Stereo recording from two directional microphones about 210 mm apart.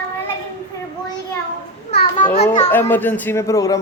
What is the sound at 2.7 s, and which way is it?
A man's voice, 10° left (ahead or behind).